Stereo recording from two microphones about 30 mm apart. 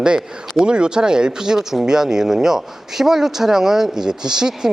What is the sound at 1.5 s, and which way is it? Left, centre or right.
Speech, centre.